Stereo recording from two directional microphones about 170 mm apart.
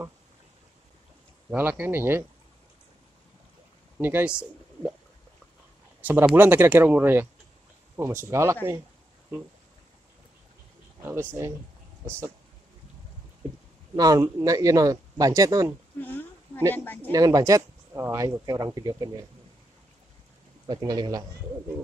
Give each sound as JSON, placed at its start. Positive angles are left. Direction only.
{"t": 1.5, "sound": "speech", "side_deg": -10}
{"t": 4.0, "sound": "speech", "side_deg": -10}
{"t": 5.9, "sound": "speech", "side_deg": -10}
{"t": 11.0, "sound": "speech", "side_deg": -15}
{"t": 13.9, "sound": "speech", "side_deg": -20}
{"t": 16.0, "sound": "a sound", "side_deg": 10}
{"t": 16.7, "sound": "speech", "side_deg": 10}
{"t": 17.1, "sound": "speech", "side_deg": -20}
{"t": 20.6, "sound": "speech", "side_deg": -25}